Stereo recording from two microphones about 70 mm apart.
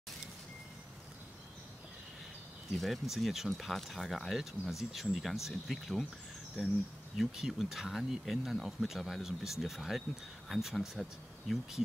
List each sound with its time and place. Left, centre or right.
2.7 s speech: centre
7.2 s speech: centre